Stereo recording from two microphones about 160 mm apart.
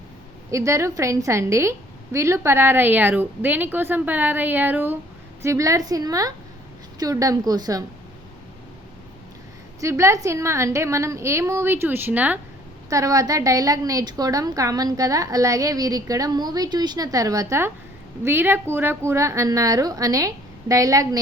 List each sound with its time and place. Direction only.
0.5 s a woman's voice: 20° right (ahead or behind)
9.8 s a woman's voice: 20° right (ahead or behind)
12.9 s a woman's voice: 20° right (ahead or behind)